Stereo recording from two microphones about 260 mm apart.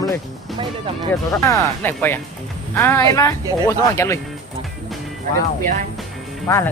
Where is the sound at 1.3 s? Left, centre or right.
Centre.